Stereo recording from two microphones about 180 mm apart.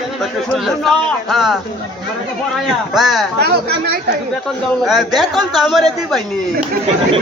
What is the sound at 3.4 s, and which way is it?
Speech, 65° right (ahead or behind).